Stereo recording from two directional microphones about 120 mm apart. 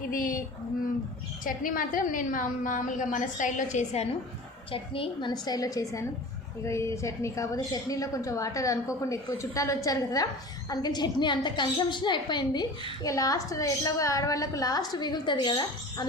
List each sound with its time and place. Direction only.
1.5 s a woman's voice: 90° left; by 4.1 s 70° left (ahead or behind)
4.7 s a woman's voice: 50° left (ahead or behind)
5.3 s a woman's voice: 30° left (ahead or behind)